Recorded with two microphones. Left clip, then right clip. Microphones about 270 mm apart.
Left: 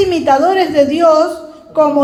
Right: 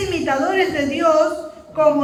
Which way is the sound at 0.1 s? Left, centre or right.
Left.